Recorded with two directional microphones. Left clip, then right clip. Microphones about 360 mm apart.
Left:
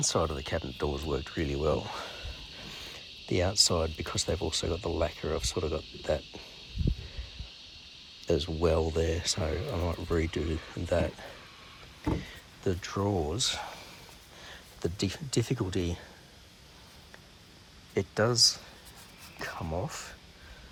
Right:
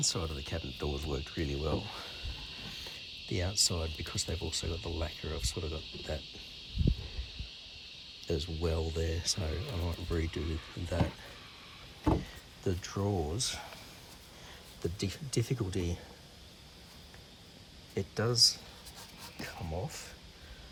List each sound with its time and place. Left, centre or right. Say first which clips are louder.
0.0 s speech: left 6 dB; centre
8.3 s speech: left 8 dB; centre
12.6 s speech: left 4 dB; centre
17.9 s speech: left 5 dB; centre